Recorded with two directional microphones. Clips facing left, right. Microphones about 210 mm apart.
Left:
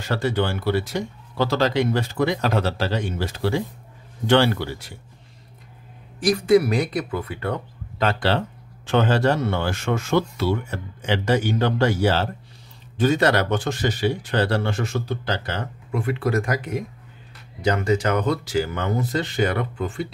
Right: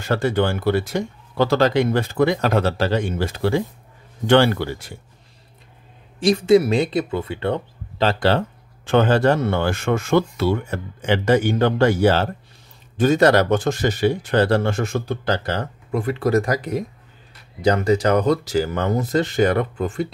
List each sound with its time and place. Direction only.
0.0 s speech: 50° right (ahead or behind)
6.1 s speech: 25° right (ahead or behind)
8.8 s speech: 50° right (ahead or behind)